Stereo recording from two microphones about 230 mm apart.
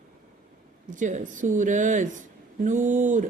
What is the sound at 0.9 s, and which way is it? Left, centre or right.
Speech, right.